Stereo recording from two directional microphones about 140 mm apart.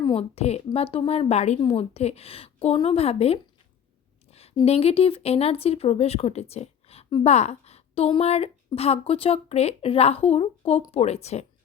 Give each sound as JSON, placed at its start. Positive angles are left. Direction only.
{"t": 0.0, "sound": "a woman's voice", "side_deg": 40}
{"t": 4.3, "sound": "a sound", "side_deg": 45}
{"t": 4.6, "sound": "a woman's voice", "side_deg": 45}